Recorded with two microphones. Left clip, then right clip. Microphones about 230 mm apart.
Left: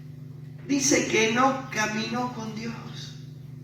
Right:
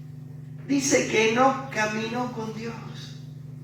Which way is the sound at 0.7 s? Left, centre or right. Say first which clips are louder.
Right 1 dB; left.